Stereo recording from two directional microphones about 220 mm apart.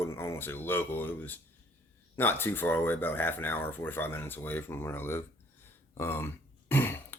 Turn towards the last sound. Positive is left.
turn(degrees=10)  # may be behind; listen again after turning